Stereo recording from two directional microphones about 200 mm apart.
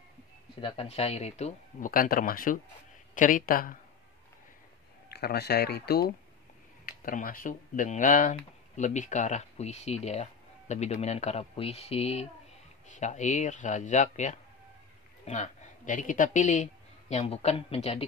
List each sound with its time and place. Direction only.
0.6 s speech: 30° left (ahead or behind); by 3.7 s 45° left (ahead or behind)
5.1 s speech: 55° left (ahead or behind); by 18.0 s 30° left (ahead or behind)